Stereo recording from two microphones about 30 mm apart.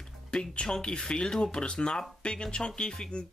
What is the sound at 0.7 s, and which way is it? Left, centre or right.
Speech, left.